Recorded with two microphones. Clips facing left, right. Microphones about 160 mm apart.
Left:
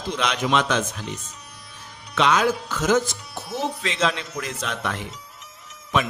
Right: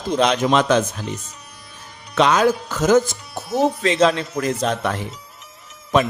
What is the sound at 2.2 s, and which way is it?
A man's voice, 40° right (ahead or behind).